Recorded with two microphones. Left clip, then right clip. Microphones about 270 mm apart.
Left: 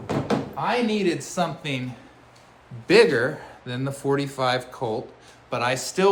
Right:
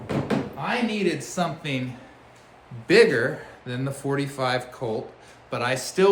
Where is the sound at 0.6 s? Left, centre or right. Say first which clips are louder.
Left 3 dB; centre.